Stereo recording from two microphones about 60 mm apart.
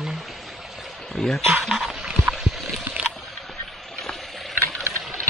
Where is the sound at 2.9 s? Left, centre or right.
Centre.